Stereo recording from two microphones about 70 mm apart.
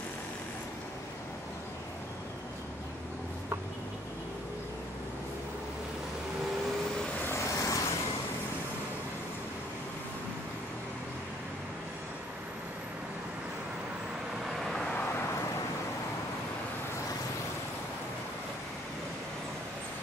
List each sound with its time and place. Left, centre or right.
7.2 s vehicle: left
14.4 s vehicle: centre